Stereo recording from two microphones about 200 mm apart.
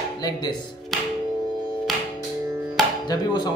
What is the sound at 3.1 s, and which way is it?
Speech, 20° left (ahead or behind).